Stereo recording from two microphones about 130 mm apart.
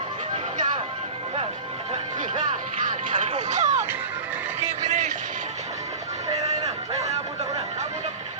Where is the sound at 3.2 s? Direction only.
65° right (ahead or behind).